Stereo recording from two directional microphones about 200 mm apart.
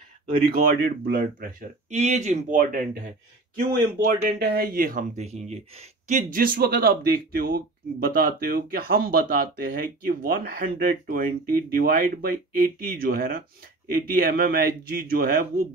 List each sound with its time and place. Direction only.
0.5 s speech: 50° right (ahead or behind)
1.9 s speech: 35° right (ahead or behind)